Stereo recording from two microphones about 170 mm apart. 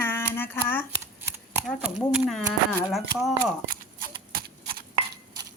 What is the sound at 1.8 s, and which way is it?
Speech, 5° right (ahead or behind).